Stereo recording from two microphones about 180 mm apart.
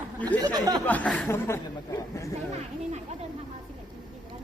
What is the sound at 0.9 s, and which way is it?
Speech, 10° left (ahead or behind).